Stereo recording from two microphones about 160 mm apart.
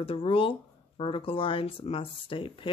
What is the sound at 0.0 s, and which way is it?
Speech, 35° left (ahead or behind).